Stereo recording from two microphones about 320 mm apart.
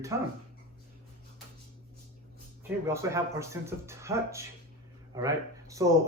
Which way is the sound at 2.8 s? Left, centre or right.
Centre.